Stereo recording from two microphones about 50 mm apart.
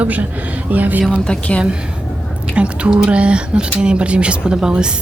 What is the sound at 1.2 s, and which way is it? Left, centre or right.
Speech, centre.